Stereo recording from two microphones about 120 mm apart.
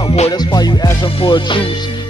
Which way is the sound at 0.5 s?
35° left (ahead or behind).